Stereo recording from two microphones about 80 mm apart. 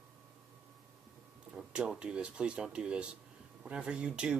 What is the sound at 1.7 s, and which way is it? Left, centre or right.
Speech, centre.